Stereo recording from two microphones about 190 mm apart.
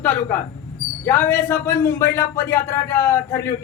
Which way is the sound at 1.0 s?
10° left (ahead or behind).